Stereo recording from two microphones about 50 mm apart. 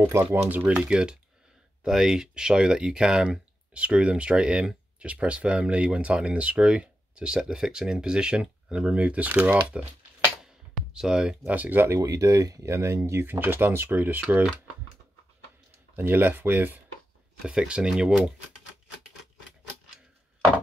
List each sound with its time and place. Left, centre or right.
0.0 s speech: right
0.5 s speech: right
0.8 s speech: centre
10.4 s music: centre
11.4 s speech: right
11.9 s speech: right
16.0 s speech: right
17.5 s speech: centre